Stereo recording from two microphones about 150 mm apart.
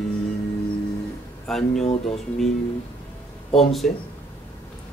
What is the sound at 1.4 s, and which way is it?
Speech, 5° left (ahead or behind).